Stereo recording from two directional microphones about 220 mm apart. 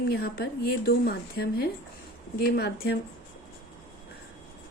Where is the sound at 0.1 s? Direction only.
45° left (ahead or behind).